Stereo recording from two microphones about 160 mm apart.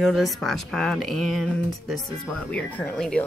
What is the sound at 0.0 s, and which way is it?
Speech, centre (ahead or behind).